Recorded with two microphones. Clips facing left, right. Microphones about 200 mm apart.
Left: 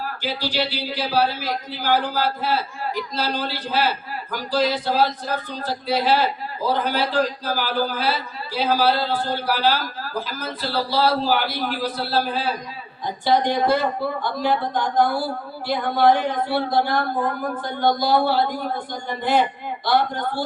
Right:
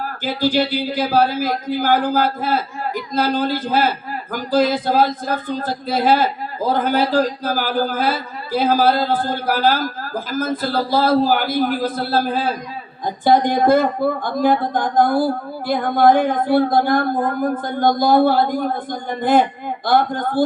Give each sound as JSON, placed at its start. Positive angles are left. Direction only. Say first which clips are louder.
{"t": 0.0, "sound": "a man's voice", "louder": "right 7 dB", "side_deg": -50}